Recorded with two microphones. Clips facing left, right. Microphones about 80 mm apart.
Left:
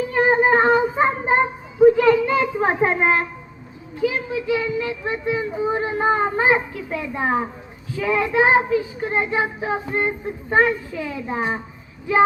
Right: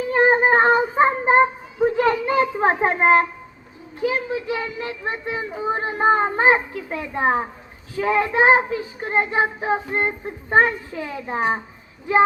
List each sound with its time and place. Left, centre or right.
0.1 s child singing: right
6.1 s a child's voice: right
7.9 s child singing: right